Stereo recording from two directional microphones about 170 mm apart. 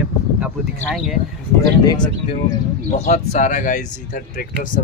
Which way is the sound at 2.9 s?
45° left (ahead or behind).